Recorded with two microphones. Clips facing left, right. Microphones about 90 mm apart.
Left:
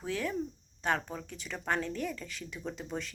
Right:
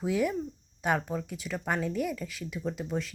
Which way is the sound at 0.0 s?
10° right (ahead or behind).